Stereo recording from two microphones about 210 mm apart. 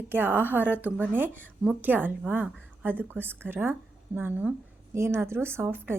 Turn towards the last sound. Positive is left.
turn(degrees=-10)  # may be behind; listen again after turning